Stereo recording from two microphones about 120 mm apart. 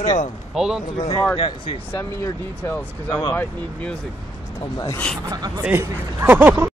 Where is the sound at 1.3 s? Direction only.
45° left (ahead or behind).